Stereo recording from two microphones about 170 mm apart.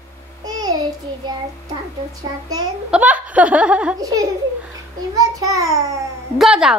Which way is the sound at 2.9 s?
10° right (ahead or behind).